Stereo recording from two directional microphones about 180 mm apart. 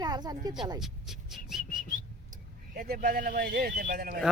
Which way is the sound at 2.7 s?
55° right (ahead or behind).